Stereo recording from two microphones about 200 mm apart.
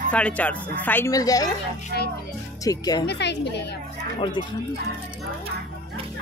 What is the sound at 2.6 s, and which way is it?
Speech, 20° left (ahead or behind).